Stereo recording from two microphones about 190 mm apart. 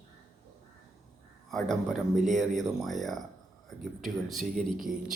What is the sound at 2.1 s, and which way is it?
Speech, 40° right (ahead or behind).